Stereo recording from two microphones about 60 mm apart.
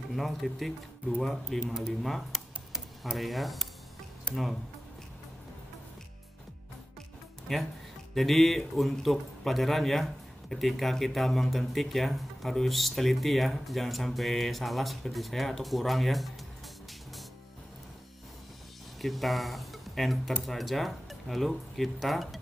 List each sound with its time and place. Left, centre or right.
0.1 s speech: centre
4.3 s speech: centre
7.5 s speech: centre
18.9 s speech: centre